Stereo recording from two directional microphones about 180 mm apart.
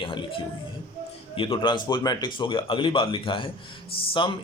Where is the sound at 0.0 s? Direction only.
30° left (ahead or behind).